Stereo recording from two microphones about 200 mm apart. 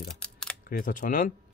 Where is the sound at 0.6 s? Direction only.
45° left (ahead or behind).